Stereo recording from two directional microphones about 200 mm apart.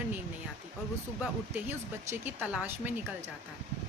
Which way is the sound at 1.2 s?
10° right (ahead or behind).